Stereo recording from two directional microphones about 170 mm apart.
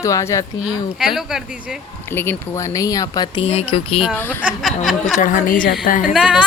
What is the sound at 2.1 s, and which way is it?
Speech, 15° left (ahead or behind).